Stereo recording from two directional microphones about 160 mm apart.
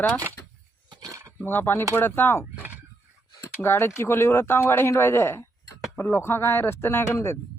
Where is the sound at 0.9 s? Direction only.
20° right (ahead or behind).